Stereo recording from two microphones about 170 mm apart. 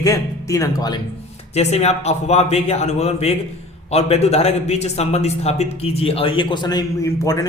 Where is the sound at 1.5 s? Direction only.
40° left (ahead or behind).